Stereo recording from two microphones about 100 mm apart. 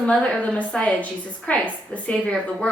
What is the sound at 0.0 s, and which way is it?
A woman's voice, 10° left (ahead or behind).